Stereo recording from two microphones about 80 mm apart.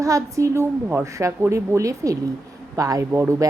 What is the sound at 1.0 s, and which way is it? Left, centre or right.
A woman's voice, right.